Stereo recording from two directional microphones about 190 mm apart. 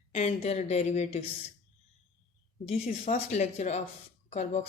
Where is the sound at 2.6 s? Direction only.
35° left (ahead or behind).